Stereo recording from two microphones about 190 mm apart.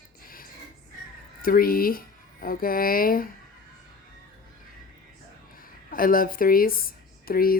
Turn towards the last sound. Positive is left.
turn(degrees=50)  # may be behind; listen again after turning